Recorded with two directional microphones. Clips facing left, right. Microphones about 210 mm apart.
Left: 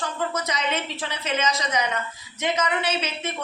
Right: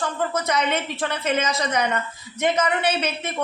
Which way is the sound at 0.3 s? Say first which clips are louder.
Right 4 dB; 55° right (ahead or behind).